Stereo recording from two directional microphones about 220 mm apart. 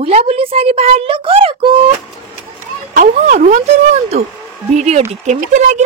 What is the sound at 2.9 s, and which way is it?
Speech, 35° right (ahead or behind).